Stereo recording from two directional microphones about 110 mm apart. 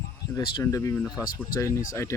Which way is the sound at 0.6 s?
30° left (ahead or behind).